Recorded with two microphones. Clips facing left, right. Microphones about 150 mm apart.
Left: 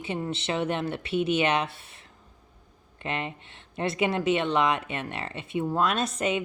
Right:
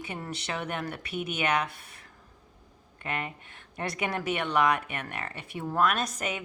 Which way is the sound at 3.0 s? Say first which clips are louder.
Left 3 dB; 25° left (ahead or behind).